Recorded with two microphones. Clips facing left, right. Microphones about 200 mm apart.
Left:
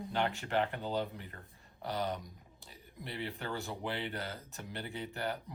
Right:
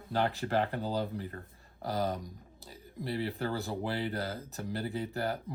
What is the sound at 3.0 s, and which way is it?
Speech, 35° right (ahead or behind).